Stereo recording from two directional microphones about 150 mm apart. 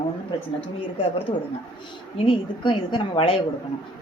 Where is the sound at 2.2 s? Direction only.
30° left (ahead or behind).